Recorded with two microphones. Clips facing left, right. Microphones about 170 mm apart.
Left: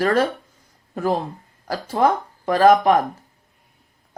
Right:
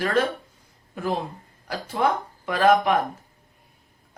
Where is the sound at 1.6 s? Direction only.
40° left (ahead or behind).